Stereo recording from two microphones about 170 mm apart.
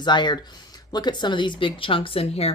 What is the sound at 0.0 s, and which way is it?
Speech, 25° left (ahead or behind).